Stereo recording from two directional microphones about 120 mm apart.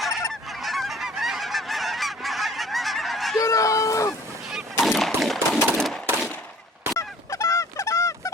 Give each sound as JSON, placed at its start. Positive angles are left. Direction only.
{"t": 0.6, "sound": "goose", "side_deg": 0}
{"t": 3.3, "sound": "a sound", "side_deg": 25}
{"t": 4.8, "sound": "gunshot", "side_deg": 0}
{"t": 7.0, "sound": "fowl", "side_deg": 25}